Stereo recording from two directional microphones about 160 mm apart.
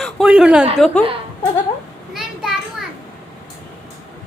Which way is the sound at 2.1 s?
Centre (ahead or behind).